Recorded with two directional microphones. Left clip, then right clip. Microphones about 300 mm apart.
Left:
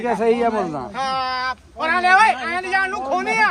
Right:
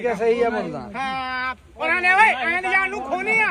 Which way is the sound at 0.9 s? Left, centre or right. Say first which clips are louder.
Left 3 dB; centre.